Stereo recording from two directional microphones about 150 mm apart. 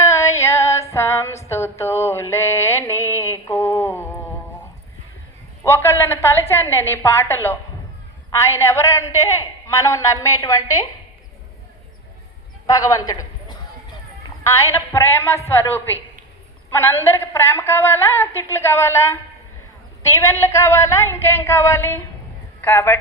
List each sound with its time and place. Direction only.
0.0 s female singing: 20° left (ahead or behind)
1.5 s a sound: 15° left (ahead or behind)
5.6 s a woman's voice: 15° left (ahead or behind)
12.6 s a man's voice: 25° left (ahead or behind)